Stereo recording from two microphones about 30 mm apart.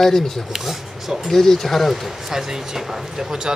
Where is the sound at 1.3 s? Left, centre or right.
Centre.